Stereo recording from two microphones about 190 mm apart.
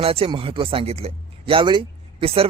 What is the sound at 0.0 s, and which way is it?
Speech, 30° right (ahead or behind).